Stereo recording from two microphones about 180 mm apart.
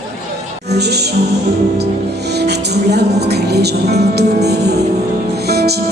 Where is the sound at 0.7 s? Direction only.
65° right (ahead or behind).